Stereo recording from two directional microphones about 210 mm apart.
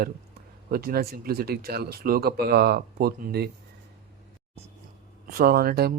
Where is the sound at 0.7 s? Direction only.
45° right (ahead or behind).